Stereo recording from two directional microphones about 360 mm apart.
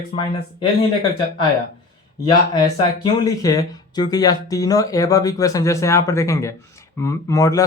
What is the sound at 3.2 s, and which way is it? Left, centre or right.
Speech, centre.